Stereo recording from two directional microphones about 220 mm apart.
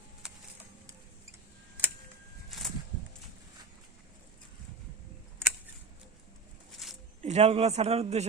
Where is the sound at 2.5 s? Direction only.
Centre (ahead or behind).